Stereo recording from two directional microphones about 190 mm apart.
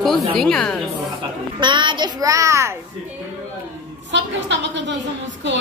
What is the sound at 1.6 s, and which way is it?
A child's voice, 25° right (ahead or behind).